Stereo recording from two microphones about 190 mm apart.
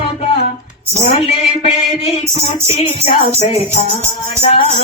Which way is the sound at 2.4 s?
35° left (ahead or behind).